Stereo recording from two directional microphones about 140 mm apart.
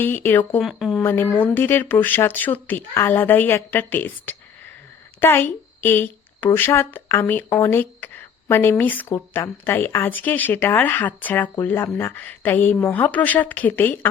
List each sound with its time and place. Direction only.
0.0 s speech: 15° left (ahead or behind)
0.6 s speech: centre (ahead or behind)
1.0 s a woman's voice: 15° left (ahead or behind)